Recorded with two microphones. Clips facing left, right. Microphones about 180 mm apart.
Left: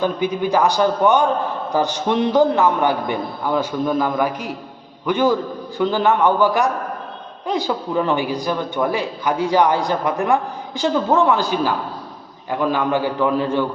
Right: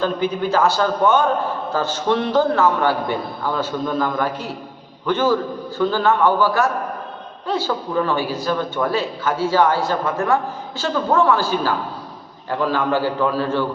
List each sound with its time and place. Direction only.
0.0 s a man's voice: 15° left (ahead or behind)